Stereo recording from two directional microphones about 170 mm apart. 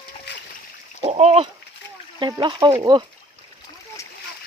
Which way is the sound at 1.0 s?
40° right (ahead or behind).